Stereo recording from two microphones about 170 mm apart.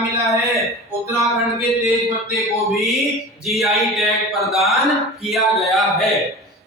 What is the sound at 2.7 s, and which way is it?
Speech, centre (ahead or behind).